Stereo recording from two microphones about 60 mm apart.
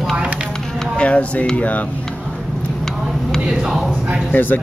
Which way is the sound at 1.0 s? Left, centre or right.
Left.